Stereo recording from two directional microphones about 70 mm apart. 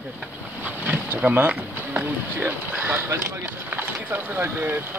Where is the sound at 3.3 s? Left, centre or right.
Right.